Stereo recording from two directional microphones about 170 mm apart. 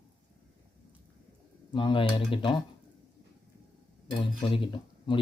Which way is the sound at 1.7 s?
30° left (ahead or behind).